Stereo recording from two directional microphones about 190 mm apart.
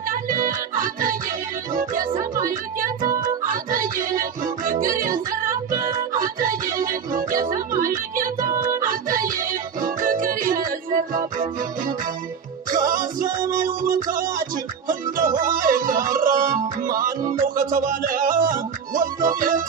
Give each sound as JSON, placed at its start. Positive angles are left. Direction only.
{"t": 0.1, "sound": "music", "side_deg": -45}
{"t": 3.0, "sound": "music", "side_deg": -20}
{"t": 3.5, "sound": "music", "side_deg": -45}
{"t": 12.9, "sound": "music", "side_deg": -45}